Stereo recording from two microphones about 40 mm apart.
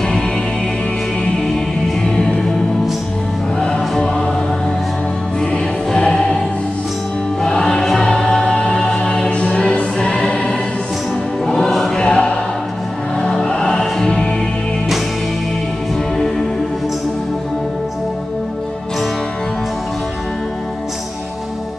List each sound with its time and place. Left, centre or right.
2.1 s music: centre
3.5 s music: left
5.9 s music: centre
7.4 s music: centre
11.7 s choir: centre
12.0 s music: centre
13.5 s music: centre